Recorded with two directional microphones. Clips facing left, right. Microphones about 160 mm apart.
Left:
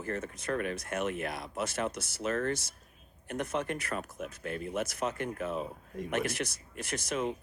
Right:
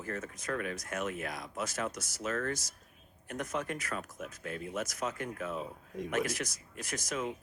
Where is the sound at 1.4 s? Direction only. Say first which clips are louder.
Left 2 dB; 30° left (ahead or behind).